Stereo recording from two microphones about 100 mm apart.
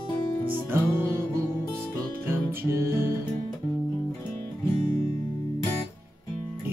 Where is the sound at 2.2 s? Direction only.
25° right (ahead or behind).